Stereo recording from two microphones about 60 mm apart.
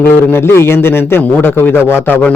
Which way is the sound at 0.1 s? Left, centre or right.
Left.